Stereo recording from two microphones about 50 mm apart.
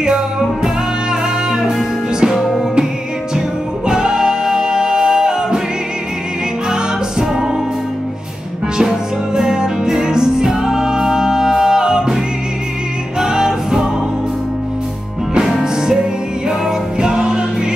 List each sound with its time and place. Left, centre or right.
1.5 s music: centre
2.3 s music: centre
3.3 s music: centre
6.7 s music: centre
8.8 s music: centre
13.2 s music: centre
15.6 s music: centre